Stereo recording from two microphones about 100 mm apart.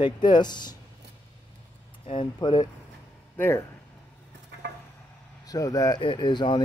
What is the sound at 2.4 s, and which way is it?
Speech, 45° left (ahead or behind).